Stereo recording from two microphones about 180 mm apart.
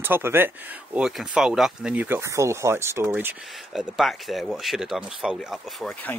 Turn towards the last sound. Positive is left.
turn(degrees=5)  # may be behind; listen again after turning